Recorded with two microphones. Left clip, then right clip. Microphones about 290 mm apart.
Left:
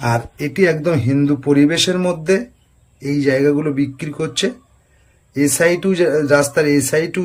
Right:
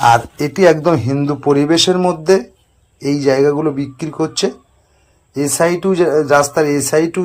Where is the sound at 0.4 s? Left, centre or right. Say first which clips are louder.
Right 4 dB; right.